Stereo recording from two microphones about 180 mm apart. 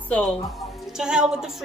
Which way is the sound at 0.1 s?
5° left (ahead or behind).